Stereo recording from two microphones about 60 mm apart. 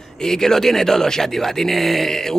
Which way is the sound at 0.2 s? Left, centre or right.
Centre.